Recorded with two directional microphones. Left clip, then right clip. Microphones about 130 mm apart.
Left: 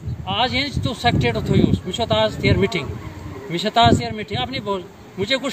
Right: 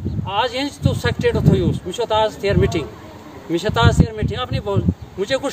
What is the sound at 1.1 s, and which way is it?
A man's voice, 90° right.